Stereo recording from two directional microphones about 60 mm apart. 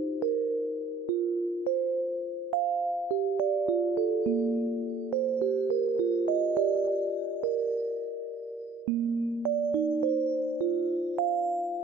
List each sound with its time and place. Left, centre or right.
4.6 s music: right
10.3 s music: right
11.1 s music: centre